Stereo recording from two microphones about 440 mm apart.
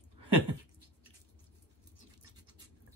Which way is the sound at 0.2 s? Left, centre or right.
Right.